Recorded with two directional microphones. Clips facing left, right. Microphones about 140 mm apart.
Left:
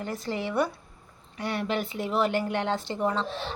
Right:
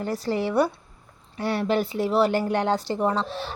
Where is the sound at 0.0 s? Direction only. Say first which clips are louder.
Right 6 dB; 35° right (ahead or behind).